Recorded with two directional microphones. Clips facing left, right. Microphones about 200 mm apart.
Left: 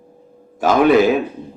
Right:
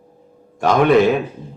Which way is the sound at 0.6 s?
Centre (ahead or behind).